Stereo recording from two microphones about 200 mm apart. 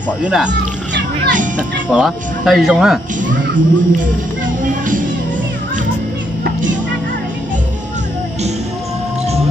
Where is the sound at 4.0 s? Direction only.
40° right (ahead or behind).